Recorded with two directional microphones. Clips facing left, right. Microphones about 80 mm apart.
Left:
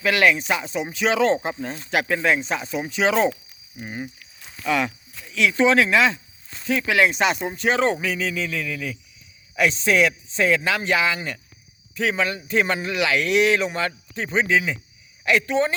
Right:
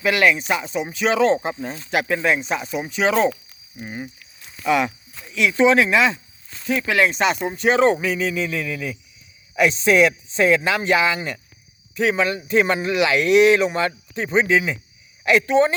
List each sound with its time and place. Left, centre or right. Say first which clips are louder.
0.0 s speech: right 1 dB; centre
4.6 s speech: right 3 dB; centre